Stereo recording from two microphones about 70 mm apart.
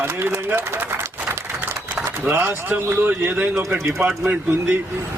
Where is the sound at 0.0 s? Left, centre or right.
Right.